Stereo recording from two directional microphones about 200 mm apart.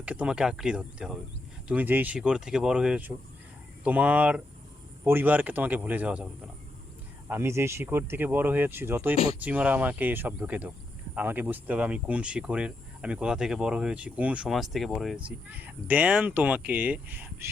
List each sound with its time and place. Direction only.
0.0 s speech: 5° right (ahead or behind)
7.3 s speech: 10° right (ahead or behind)
9.1 s speech: 30° left (ahead or behind)
9.4 s speech: 5° right (ahead or behind)